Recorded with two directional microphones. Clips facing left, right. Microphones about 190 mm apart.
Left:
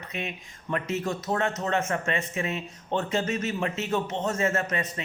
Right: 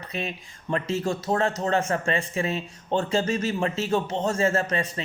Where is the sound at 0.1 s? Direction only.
35° right (ahead or behind).